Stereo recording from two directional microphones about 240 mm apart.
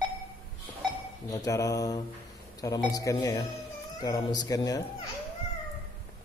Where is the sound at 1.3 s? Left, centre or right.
Centre.